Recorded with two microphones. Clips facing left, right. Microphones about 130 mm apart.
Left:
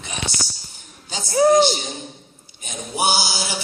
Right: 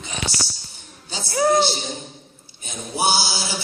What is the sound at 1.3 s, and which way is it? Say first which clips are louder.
Speech: left 4 dB; 15° left (ahead or behind).